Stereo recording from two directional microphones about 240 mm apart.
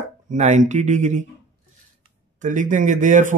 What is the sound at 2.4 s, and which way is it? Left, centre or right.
Speech, right.